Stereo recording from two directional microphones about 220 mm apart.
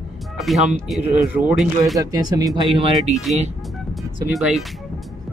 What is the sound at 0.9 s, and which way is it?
Speech, 5° right (ahead or behind).